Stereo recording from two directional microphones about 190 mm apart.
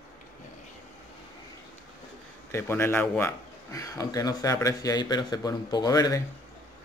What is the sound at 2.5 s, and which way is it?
Speech, 10° left (ahead or behind).